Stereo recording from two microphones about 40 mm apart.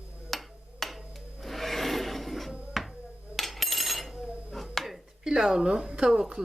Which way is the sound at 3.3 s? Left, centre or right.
Centre.